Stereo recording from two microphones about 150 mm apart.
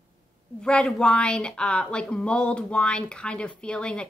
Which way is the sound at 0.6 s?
5° left (ahead or behind).